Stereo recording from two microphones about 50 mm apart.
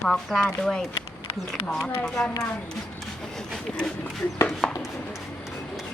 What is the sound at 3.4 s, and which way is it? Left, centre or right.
A woman's voice, centre.